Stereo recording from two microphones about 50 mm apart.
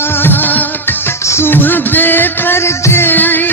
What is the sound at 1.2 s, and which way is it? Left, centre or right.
Music, left.